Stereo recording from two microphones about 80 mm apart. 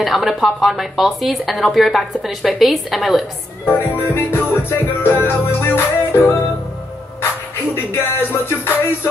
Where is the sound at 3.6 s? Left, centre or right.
Left.